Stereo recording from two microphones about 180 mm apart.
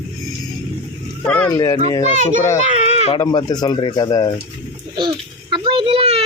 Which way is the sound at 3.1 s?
25° left (ahead or behind).